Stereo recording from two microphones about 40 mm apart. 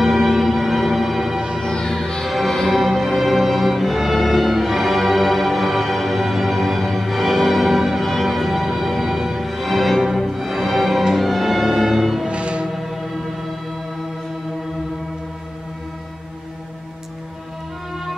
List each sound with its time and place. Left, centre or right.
0.0 s music: centre
1.6 s music: centre
2.2 s music: centre
12.3 s music: right
12.6 s music: centre